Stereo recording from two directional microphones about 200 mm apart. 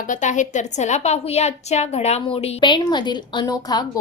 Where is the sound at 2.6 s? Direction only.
20° left (ahead or behind).